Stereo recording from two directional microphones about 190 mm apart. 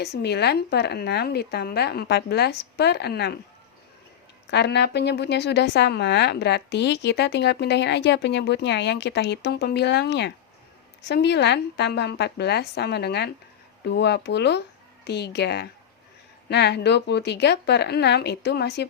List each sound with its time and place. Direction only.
0.0 s a woman's voice: 60° left (ahead or behind)
4.5 s a woman's voice: 60° left (ahead or behind)